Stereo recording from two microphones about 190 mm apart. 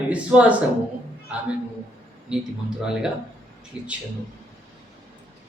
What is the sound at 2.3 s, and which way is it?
Speech, 5° right (ahead or behind).